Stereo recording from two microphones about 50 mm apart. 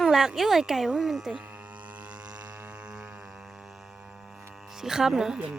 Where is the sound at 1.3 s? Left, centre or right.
Right; by 4.4 s centre.